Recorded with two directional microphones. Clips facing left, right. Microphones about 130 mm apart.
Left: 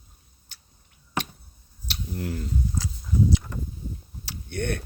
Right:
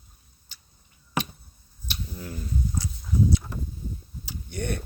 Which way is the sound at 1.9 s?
80° left.